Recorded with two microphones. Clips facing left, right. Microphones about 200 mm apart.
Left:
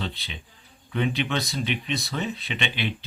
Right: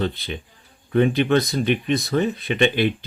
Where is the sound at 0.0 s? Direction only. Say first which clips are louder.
Right 9 dB; 50° right (ahead or behind).